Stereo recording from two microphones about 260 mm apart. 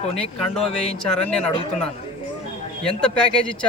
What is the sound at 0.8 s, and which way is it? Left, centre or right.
Speech, centre.